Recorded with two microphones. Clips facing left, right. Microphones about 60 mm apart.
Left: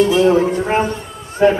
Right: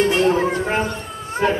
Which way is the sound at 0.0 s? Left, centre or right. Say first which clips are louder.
Left 4 dB; right.